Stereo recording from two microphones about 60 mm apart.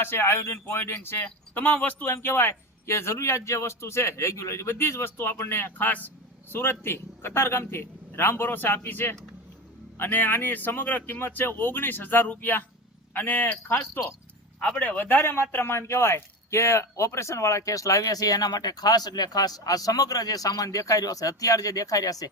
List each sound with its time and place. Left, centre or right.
0.0 s a man's voice: left
2.1 s a man's voice: left